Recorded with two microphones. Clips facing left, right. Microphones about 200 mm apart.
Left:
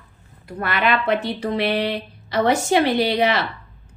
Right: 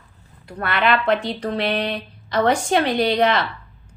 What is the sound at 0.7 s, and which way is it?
Speech, 50° left (ahead or behind).